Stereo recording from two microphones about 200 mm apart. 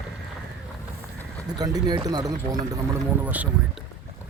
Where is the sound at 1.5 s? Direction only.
20° right (ahead or behind).